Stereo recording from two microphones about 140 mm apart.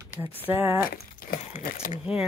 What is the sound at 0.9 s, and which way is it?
Crumpling, 90° left.